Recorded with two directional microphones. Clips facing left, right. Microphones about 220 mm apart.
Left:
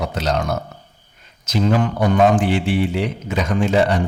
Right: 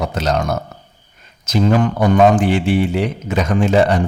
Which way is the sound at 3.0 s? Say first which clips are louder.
Right 3 dB; 45° right (ahead or behind).